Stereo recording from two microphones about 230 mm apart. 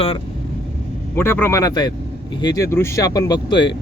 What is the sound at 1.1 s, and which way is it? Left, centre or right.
Speech, centre.